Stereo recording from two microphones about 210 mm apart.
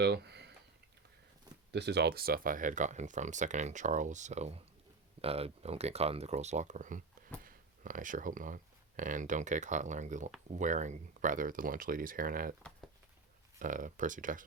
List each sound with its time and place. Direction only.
0.0 s a sound: 55° right (ahead or behind)
1.7 s speech: 50° right (ahead or behind)
13.6 s speech: 40° right (ahead or behind)